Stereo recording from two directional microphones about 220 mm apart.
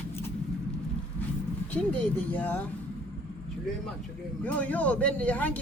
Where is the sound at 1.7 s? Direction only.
5° left (ahead or behind).